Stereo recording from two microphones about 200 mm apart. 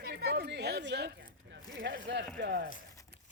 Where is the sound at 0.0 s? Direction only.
50° right (ahead or behind).